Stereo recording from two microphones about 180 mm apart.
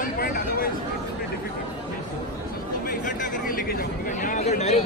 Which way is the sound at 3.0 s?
45° left (ahead or behind).